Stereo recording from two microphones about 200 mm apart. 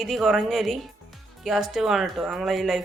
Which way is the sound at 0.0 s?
Centre (ahead or behind).